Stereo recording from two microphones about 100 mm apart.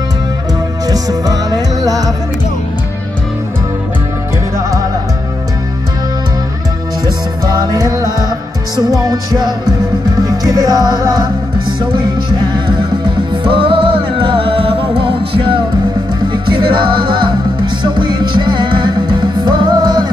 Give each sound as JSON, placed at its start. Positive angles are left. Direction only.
{"t": 0.8, "sound": "music", "side_deg": -40}
{"t": 7.5, "sound": "music", "side_deg": -40}
{"t": 10.2, "sound": "music", "side_deg": -40}